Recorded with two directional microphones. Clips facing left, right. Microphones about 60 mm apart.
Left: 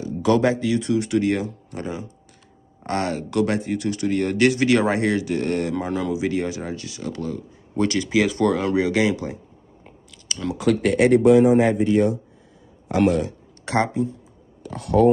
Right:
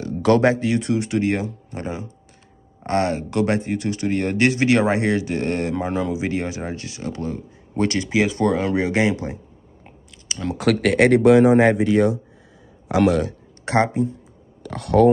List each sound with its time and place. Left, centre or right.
0.0 s speech: right
1.0 s speech: right
10.2 s a sound: right
10.6 s speech: right
13.7 s speech: right
14.6 s speech: right